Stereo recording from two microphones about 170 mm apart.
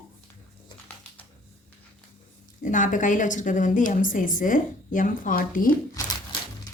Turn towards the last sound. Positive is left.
turn(degrees=25)  # may be behind; listen again after turning